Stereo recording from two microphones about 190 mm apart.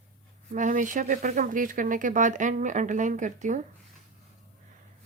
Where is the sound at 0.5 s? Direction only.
40° right (ahead or behind).